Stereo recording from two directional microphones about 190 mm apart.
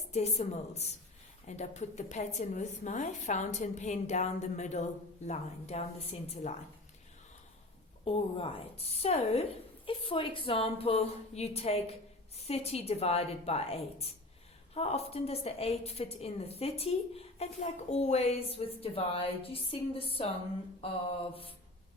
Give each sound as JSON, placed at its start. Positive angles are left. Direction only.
{"t": 0.1, "sound": "a woman's voice", "side_deg": 35}
{"t": 8.0, "sound": "a woman's voice", "side_deg": 30}